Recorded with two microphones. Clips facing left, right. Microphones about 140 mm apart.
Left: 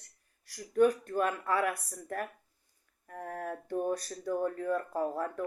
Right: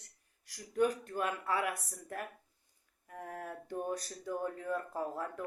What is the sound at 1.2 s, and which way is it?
Speech, 15° right (ahead or behind).